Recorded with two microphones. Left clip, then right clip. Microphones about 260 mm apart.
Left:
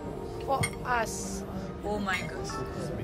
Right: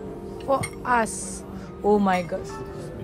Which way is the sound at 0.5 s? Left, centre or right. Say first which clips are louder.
Right 7 dB; right.